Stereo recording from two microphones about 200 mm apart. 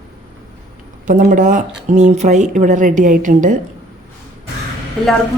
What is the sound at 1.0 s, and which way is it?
Speech, 40° right (ahead or behind).